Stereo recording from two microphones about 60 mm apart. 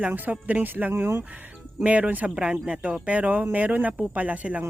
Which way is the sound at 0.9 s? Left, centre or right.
Right.